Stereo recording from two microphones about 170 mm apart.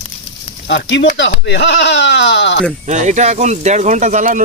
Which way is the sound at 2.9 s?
45° right (ahead or behind).